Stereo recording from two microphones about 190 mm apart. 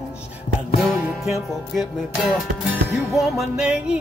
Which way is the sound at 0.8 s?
Centre (ahead or behind).